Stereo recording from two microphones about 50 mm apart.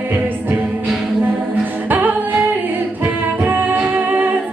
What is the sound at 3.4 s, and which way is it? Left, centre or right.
Music, right.